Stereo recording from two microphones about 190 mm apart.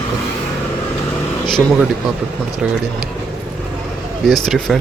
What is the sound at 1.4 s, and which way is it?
Speech, centre (ahead or behind).